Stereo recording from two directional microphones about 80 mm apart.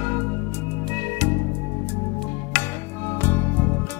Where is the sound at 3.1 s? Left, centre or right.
Left.